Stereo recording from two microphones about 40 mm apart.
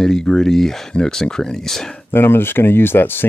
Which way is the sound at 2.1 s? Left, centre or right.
Left.